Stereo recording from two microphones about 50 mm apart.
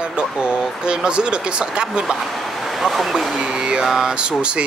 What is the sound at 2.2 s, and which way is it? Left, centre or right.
Speech, centre.